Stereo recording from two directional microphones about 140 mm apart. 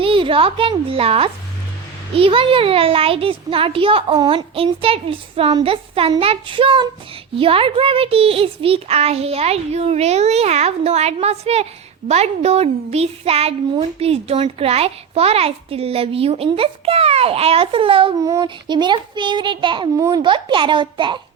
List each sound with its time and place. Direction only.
0.0 s a woman's voice: 40° right (ahead or behind)
18.2 s a child's voice: 25° right (ahead or behind)
20.0 s a child's voice: 25° right (ahead or behind)
20.2 s a child's voice: 35° right (ahead or behind)